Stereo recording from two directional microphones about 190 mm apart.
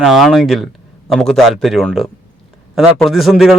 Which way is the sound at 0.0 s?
Centre (ahead or behind).